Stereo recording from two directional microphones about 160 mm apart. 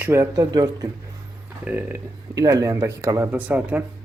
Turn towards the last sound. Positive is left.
turn(degrees=-10)  # may be behind; listen again after turning